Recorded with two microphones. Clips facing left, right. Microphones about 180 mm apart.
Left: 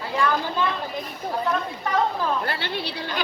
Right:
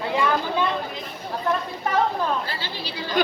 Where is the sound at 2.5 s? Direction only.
60° left (ahead or behind).